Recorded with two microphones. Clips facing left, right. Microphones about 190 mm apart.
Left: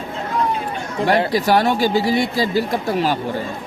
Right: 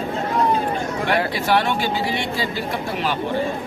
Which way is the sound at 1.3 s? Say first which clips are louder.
Left 4 dB; 40° left (ahead or behind).